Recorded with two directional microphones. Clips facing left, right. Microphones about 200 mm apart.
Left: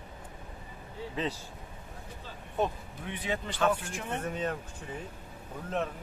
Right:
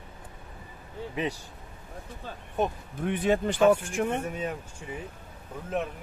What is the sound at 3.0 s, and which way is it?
Speech, 50° right (ahead or behind).